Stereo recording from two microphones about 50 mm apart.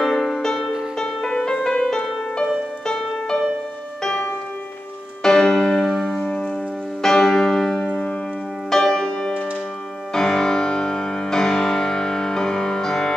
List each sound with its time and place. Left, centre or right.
0.0 s music: centre
6.1 s music: centre